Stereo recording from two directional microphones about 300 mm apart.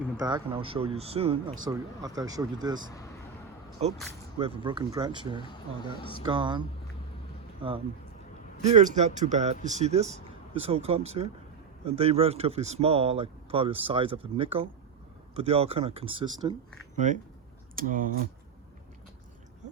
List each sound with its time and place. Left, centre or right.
0.2 s speech: centre
3.8 s speech: right
5.4 s speech: centre
6.2 s speech: centre
8.7 s speech: right
17.7 s speech: right